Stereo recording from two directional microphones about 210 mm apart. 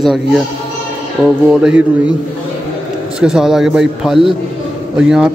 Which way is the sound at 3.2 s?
Centre (ahead or behind).